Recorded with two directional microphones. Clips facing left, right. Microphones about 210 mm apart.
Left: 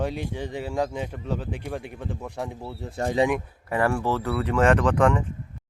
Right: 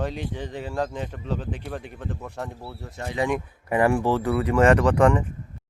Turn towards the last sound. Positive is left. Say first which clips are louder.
# right 2 dB
turn(degrees=-5)  # may be behind; listen again after turning